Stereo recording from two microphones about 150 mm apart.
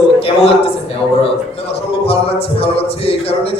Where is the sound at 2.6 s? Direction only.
40° left (ahead or behind).